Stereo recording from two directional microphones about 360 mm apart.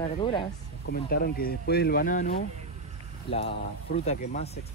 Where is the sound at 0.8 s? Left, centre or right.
Left.